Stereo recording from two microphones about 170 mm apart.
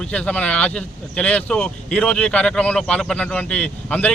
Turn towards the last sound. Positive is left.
turn(degrees=10)  # may be behind; listen again after turning